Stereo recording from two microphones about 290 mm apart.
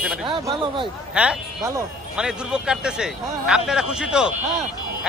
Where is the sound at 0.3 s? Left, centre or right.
Centre.